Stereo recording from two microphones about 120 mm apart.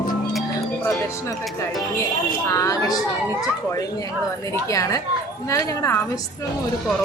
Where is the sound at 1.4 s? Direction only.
Centre (ahead or behind).